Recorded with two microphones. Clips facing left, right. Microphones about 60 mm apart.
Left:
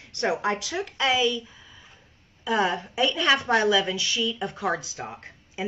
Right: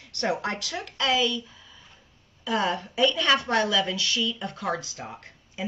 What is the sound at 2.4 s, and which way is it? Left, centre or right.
A woman's voice, left.